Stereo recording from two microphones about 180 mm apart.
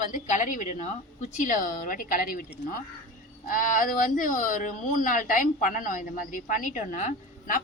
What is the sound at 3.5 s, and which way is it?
A woman's voice, 50° left (ahead or behind).